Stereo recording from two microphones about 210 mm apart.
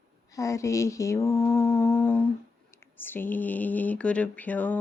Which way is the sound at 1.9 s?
5° left (ahead or behind).